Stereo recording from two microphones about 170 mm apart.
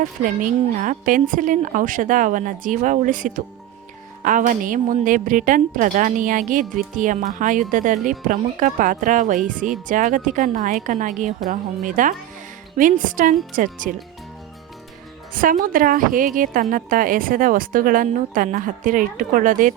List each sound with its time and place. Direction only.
0.0 s a woman's voice: 50° right (ahead or behind)
15.3 s a woman's voice: 55° right (ahead or behind)